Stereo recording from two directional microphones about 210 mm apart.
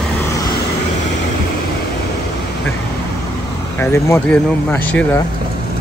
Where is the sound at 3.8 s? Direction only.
10° left (ahead or behind).